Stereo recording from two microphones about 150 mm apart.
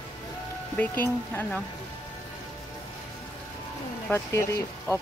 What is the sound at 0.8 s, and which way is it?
Speech, 15° left (ahead or behind).